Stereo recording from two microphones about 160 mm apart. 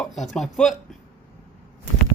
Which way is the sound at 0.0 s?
Centre (ahead or behind).